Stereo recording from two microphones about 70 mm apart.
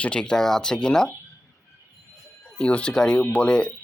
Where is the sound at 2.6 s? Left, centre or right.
Centre.